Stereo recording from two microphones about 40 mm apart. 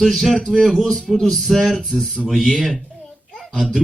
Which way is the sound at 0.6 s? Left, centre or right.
Centre.